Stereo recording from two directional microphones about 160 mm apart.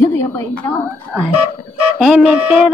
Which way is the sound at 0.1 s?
15° left (ahead or behind).